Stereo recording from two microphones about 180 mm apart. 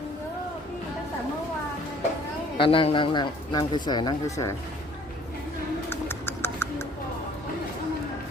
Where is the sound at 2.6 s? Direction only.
30° left (ahead or behind).